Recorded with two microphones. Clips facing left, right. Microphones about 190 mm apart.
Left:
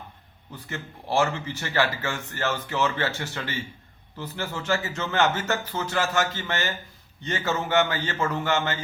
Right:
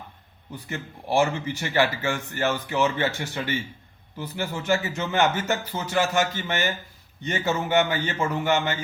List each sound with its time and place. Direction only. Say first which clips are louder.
0.5 s speech: right 2 dB; 15° right (ahead or behind)